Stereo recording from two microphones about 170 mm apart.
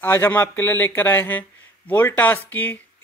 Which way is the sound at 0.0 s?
15° left (ahead or behind).